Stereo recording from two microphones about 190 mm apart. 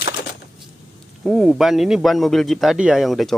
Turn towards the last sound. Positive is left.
turn(degrees=0)  # may be behind; listen again after turning